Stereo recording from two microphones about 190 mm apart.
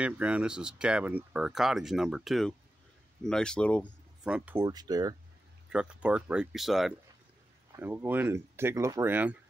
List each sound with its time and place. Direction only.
0.0 s speech: 5° right (ahead or behind)
4.2 s speech: 5° right (ahead or behind)
4.6 s speech: 20° right (ahead or behind)
5.7 s speech: 5° right (ahead or behind)
7.7 s speech: 10° right (ahead or behind)